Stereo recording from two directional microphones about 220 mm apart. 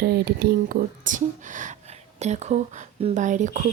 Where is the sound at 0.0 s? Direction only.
45° right (ahead or behind).